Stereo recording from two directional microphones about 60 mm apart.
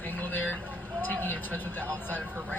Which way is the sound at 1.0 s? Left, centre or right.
Left.